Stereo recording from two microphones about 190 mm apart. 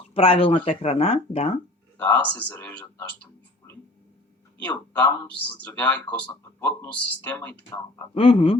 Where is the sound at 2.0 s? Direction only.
10° left (ahead or behind).